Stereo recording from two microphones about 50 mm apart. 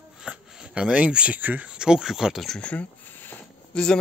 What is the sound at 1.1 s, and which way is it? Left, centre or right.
Speech, right.